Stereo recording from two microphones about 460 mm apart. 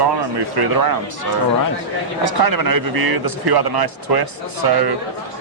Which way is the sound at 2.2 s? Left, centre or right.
Right.